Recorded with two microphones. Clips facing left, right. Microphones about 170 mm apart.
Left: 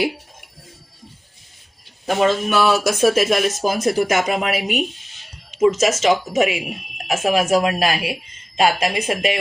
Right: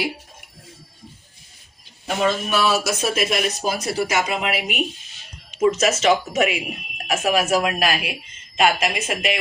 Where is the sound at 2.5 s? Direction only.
55° left (ahead or behind).